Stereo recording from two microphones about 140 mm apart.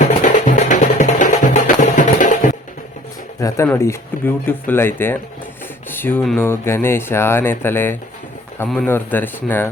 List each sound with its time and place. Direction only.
0.0 s music: 60° left (ahead or behind)
3.7 s speech: 20° left (ahead or behind)